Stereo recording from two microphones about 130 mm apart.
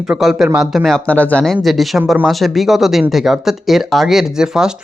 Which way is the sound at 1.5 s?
Centre (ahead or behind).